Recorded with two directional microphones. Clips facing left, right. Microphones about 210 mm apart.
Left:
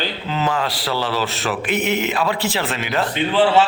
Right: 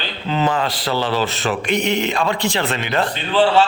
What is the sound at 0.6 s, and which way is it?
A man's voice, 5° left (ahead or behind).